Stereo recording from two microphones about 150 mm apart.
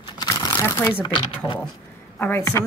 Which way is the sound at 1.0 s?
35° left (ahead or behind).